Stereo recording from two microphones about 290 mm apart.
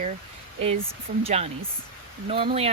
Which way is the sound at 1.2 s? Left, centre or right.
Right.